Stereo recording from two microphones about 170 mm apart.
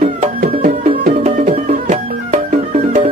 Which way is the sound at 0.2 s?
40° right (ahead or behind).